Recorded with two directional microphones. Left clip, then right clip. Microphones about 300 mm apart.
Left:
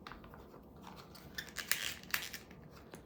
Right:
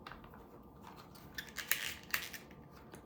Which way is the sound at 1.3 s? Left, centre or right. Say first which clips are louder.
Even; centre.